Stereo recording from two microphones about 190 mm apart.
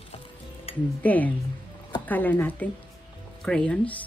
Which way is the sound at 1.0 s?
10° left (ahead or behind).